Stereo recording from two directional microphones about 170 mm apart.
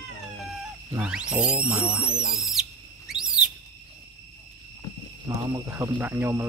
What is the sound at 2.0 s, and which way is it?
Speech, 35° left (ahead or behind).